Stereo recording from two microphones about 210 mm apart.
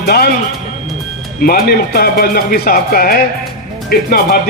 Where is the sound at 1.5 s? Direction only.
50° left (ahead or behind).